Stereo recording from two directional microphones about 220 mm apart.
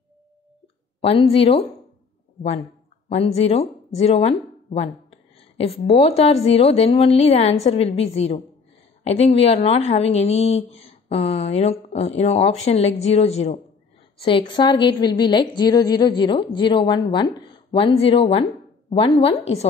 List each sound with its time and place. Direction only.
1.0 s a woman's voice: 25° left (ahead or behind)
3.1 s a woman's voice: 30° left (ahead or behind)